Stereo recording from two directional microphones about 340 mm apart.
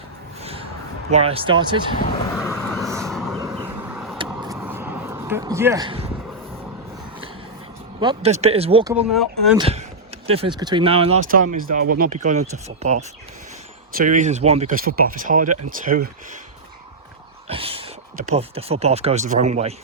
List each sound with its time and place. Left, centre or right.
0.4 s a sound: centre
1.1 s speech: centre
2.3 s vehicle: centre
4.3 s a sound: centre
7.9 s speech: centre
9.0 s speech: centre
9.6 s speech: centre
17.5 s speech: centre